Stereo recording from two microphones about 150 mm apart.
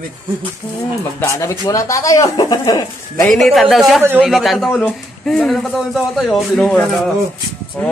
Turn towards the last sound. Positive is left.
turn(degrees=5)  # may be behind; listen again after turning